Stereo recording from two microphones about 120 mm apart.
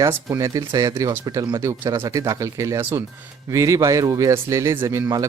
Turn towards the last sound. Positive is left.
turn(degrees=-25)  # may be behind; listen again after turning